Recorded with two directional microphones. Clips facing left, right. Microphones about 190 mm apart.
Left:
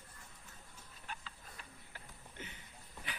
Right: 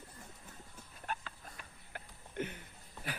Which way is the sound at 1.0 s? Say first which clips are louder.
Right 8 dB; 55° right (ahead or behind).